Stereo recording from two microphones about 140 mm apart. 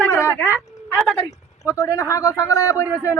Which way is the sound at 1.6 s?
20° left (ahead or behind).